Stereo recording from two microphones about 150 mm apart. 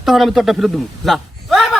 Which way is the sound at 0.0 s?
Centre (ahead or behind).